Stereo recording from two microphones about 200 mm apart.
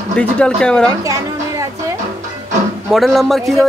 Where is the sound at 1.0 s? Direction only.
15° right (ahead or behind).